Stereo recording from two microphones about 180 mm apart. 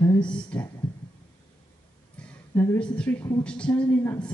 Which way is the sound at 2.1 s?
10° left (ahead or behind).